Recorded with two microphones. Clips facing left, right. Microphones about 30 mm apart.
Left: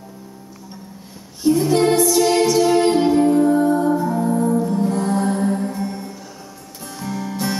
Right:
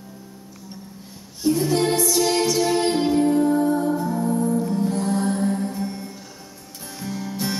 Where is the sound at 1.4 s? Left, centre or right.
Centre.